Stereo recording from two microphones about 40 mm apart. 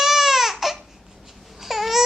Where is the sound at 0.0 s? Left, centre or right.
Centre.